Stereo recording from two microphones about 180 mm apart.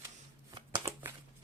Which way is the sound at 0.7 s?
15° right (ahead or behind).